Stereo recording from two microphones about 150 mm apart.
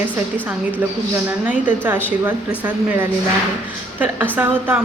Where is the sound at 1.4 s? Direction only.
10° right (ahead or behind).